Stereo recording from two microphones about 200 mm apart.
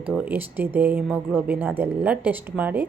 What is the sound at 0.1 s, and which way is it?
Speech, 5° right (ahead or behind).